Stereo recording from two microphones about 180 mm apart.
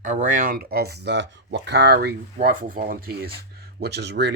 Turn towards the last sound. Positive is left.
turn(degrees=-65)  # may be behind; listen again after turning